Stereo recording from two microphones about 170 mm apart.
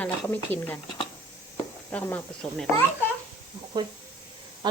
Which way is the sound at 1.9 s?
10° left (ahead or behind).